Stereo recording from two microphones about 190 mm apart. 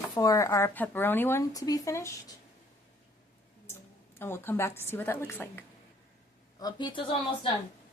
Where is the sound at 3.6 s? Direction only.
10° left (ahead or behind).